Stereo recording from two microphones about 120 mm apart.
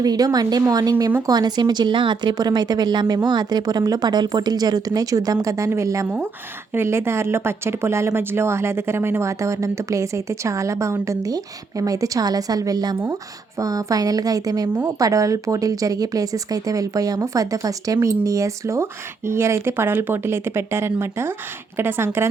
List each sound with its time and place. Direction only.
0.0 s speech: 30° right (ahead or behind)